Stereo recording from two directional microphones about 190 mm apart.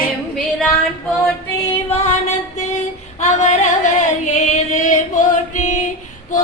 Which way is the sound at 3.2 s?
35° left (ahead or behind).